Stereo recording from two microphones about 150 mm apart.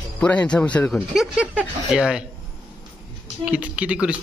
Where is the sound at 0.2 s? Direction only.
10° left (ahead or behind).